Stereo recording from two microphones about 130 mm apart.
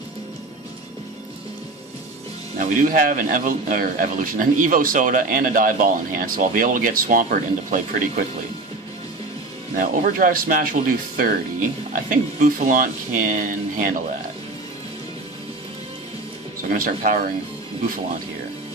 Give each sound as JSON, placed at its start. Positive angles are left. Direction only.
{"t": 2.6, "sound": "speech", "side_deg": -90}
{"t": 9.8, "sound": "speech", "side_deg": -90}
{"t": 16.6, "sound": "speech", "side_deg": -90}